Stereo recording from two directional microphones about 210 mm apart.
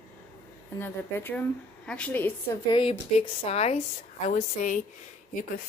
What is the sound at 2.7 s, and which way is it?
A woman's voice, 25° left (ahead or behind).